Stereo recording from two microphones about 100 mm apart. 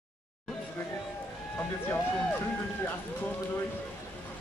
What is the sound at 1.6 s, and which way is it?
Speech, 20° left (ahead or behind).